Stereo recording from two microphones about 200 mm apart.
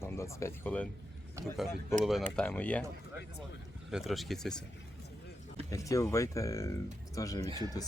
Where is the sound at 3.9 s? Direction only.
Centre (ahead or behind).